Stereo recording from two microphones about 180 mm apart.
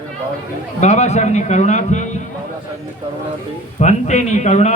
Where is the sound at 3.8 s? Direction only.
40° left (ahead or behind).